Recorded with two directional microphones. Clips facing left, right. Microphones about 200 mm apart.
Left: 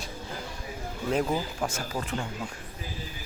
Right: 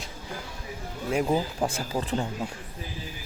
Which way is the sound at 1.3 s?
30° right (ahead or behind).